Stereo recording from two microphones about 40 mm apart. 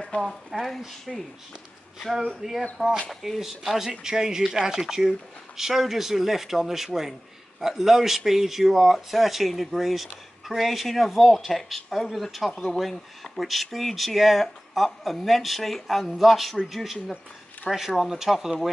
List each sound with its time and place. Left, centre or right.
0.1 s speech: left
0.5 s speech: centre